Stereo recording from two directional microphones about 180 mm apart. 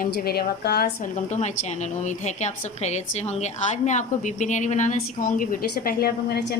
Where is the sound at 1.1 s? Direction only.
40° left (ahead or behind).